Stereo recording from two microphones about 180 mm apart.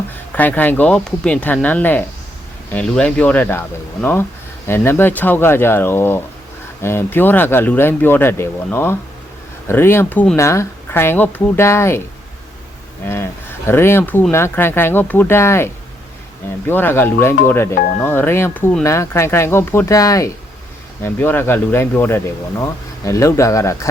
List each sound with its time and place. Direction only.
0.3 s speech: 10° left (ahead or behind)
13.1 s speech: 15° left (ahead or behind)